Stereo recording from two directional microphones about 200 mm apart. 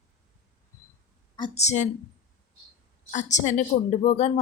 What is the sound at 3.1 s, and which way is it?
A woman's voice, 35° left (ahead or behind).